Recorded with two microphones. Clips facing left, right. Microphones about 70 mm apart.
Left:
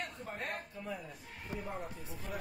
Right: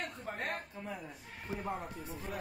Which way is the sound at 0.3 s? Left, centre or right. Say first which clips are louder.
Right 4 dB; right.